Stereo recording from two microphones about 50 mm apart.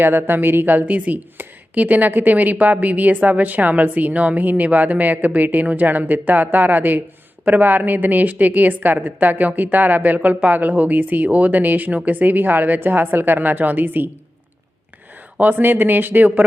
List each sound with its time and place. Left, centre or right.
0.0 s a woman's voice: right
15.4 s a woman's voice: right